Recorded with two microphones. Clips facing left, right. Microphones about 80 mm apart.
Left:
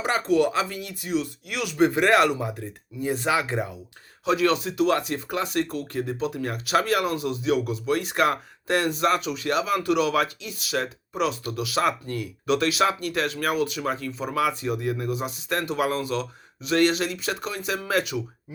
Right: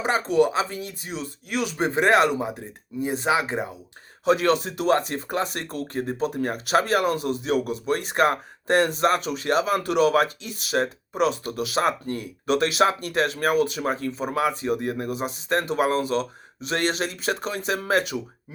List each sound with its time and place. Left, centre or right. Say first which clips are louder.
0.0 s speech: right 1 dB; right
4.3 s speech: right 2 dB; right